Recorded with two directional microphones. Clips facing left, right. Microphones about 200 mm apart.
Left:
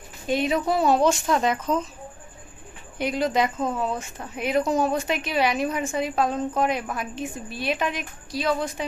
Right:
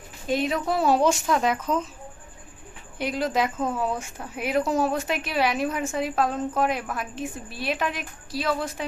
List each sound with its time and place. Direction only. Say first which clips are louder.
0.3 s speech: left 2 dB; centre (ahead or behind)
3.0 s speech: left 2 dB; centre (ahead or behind)